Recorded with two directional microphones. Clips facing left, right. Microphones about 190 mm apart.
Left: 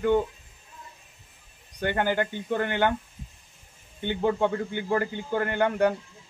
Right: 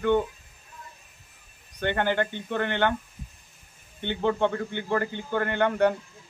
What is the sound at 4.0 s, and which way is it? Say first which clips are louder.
A man's voice: even; 10° left (ahead or behind).